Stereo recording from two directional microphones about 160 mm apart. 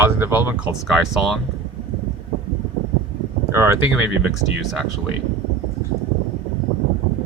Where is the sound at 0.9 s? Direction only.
Centre (ahead or behind).